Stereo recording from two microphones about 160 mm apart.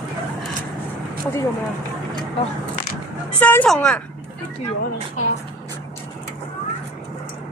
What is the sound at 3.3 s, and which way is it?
Speech, 10° left (ahead or behind).